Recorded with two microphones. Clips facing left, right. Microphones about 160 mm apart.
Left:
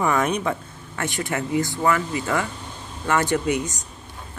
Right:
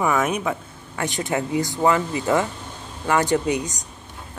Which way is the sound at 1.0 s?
15° right (ahead or behind).